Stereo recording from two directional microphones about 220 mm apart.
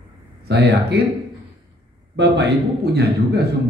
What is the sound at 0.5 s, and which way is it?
Speech, 50° right (ahead or behind).